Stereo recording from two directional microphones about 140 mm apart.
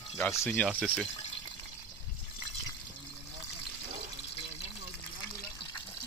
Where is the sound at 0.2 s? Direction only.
15° left (ahead or behind).